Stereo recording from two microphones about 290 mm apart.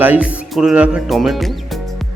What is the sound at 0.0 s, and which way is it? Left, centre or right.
Speech, centre.